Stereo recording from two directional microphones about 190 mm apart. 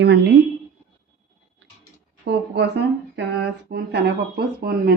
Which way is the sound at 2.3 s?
65° right (ahead or behind).